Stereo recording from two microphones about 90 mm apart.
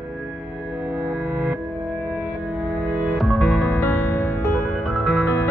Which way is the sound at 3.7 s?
20° left (ahead or behind).